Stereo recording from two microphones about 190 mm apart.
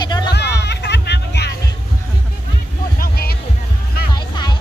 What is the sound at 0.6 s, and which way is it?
Music, 65° left (ahead or behind).